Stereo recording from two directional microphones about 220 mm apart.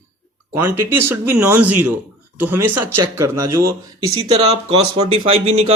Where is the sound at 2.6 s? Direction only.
90° right.